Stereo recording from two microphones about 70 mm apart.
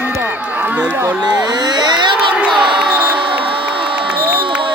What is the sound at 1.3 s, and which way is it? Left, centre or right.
Speech, right.